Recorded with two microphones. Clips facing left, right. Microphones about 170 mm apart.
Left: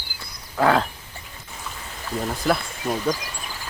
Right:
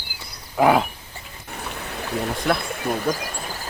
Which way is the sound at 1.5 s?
65° right (ahead or behind).